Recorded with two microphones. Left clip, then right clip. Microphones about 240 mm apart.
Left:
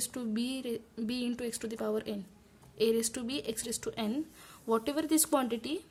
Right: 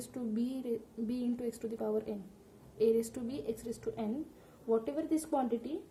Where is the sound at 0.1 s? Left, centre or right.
Left.